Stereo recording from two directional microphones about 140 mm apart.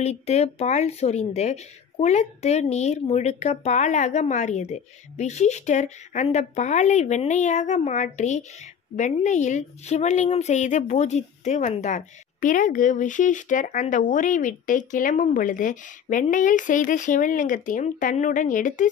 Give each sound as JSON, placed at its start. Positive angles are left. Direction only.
{"t": 0.0, "sound": "a woman's voice", "side_deg": 50}